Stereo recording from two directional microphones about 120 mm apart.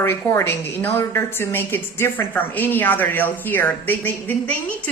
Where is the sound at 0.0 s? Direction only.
20° left (ahead or behind).